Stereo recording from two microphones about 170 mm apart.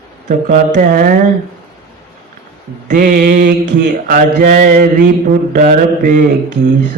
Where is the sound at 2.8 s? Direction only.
50° right (ahead or behind).